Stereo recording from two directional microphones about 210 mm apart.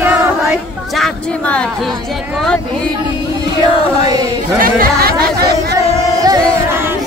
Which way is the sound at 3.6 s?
20° right (ahead or behind).